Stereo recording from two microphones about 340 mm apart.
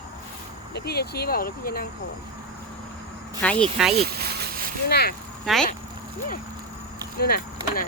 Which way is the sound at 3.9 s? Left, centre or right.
Right.